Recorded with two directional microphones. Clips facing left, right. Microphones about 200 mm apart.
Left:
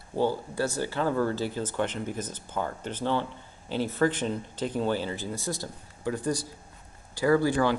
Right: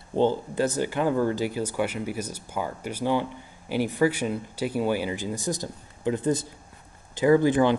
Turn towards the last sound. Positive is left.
turn(degrees=-20)  # may be behind; listen again after turning